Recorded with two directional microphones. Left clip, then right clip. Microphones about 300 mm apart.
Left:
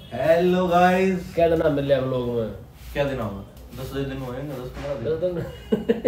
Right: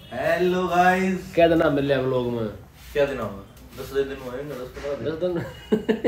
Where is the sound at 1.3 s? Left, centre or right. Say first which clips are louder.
Right 3 dB; right.